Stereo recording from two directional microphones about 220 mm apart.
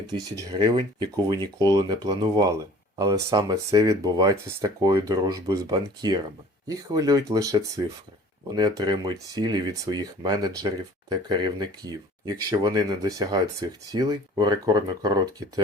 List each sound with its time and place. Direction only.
0.3 s speech: 15° right (ahead or behind)